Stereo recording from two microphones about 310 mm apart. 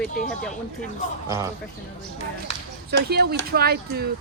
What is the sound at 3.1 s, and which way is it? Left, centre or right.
Speech, right.